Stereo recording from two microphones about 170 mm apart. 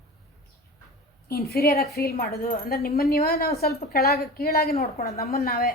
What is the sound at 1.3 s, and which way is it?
A woman's voice, 65° left (ahead or behind).